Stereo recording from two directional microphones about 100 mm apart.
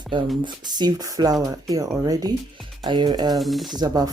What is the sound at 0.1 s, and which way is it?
Speech, 55° right (ahead or behind).